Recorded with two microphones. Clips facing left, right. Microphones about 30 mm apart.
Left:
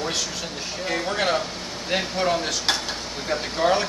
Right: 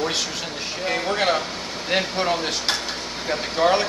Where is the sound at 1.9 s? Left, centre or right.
Centre.